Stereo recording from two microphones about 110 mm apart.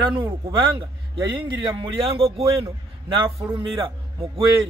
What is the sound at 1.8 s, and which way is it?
Speech, 55° right (ahead or behind).